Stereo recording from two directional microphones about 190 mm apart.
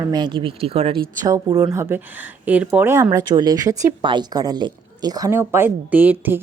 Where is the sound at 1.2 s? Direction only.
20° right (ahead or behind).